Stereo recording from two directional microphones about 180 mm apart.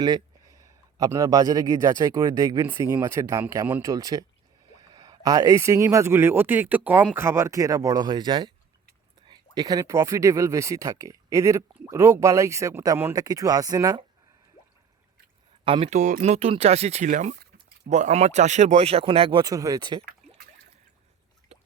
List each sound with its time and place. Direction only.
0.0 s speech: 20° right (ahead or behind)
15.6 s speech: 30° right (ahead or behind)
21.5 s a sound: 35° right (ahead or behind)